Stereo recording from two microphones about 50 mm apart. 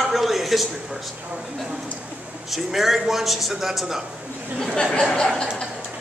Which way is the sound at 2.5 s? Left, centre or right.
Centre.